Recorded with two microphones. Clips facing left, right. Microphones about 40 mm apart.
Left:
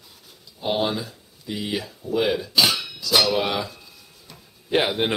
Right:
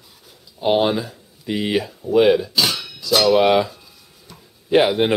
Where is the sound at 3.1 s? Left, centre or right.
Centre.